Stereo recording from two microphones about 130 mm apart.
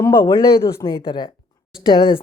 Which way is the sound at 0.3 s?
25° left (ahead or behind).